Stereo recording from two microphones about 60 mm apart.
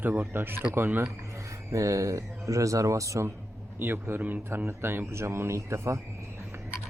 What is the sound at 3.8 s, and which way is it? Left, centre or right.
Speech, right.